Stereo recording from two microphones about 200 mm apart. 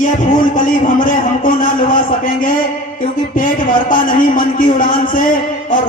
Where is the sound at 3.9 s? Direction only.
45° left (ahead or behind).